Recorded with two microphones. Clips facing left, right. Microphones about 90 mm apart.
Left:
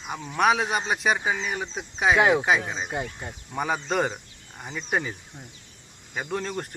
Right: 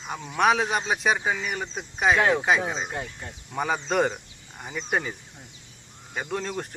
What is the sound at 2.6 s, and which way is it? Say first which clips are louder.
Speech: right 3 dB; 15° right (ahead or behind).